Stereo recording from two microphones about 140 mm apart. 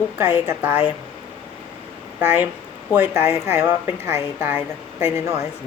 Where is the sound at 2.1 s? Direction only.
15° right (ahead or behind).